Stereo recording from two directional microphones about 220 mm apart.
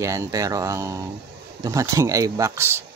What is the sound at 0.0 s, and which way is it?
Speech, 15° right (ahead or behind).